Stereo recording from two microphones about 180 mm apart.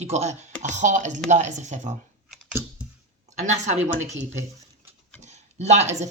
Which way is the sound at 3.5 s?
40° right (ahead or behind).